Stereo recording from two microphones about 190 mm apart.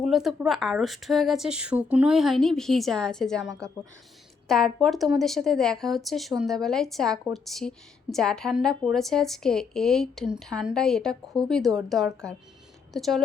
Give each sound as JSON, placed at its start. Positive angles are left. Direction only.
{"t": 0.0, "sound": "a woman's voice", "side_deg": 0}